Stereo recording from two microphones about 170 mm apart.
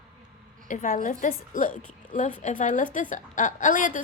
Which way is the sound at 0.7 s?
50° left (ahead or behind).